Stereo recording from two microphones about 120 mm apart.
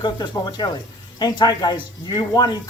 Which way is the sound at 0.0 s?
35° left (ahead or behind).